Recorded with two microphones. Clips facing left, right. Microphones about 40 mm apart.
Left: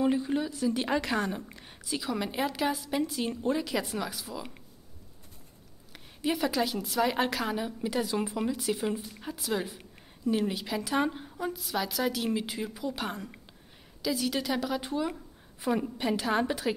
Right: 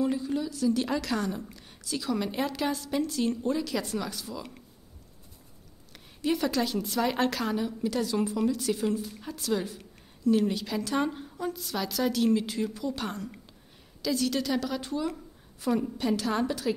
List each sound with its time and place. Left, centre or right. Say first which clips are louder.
0.0 s a woman's voice: left 1 dB; left
5.9 s a woman's voice: right 2 dB; centre